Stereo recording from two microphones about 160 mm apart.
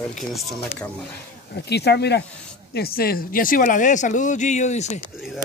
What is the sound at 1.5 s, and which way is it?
Speech, 90° left.